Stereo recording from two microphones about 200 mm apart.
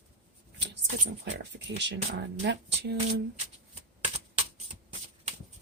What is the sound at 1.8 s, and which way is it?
Speech, 60° right (ahead or behind).